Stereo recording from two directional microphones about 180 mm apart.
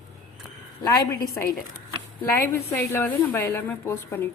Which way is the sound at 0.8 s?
20° left (ahead or behind).